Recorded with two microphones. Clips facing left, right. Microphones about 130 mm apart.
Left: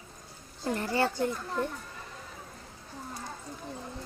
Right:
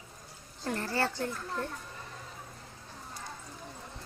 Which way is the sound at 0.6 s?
15° left (ahead or behind).